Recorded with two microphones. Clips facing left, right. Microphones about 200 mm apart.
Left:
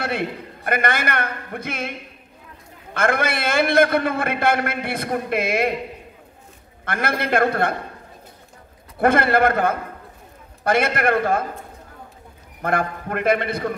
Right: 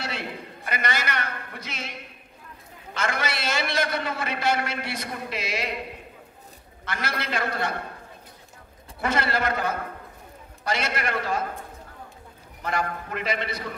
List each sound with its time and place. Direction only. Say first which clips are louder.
0.0 s a man's voice: left 8 dB; 55° left (ahead or behind)
6.8 s a man's voice: left 7 dB; 55° left (ahead or behind)
9.0 s a man's voice: left 9 dB; 55° left (ahead or behind)
12.6 s a man's voice: left 6 dB; 55° left (ahead or behind)